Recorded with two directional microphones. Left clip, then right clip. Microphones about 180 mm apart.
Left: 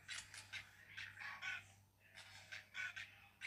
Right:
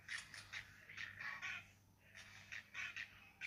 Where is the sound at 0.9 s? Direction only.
10° left (ahead or behind).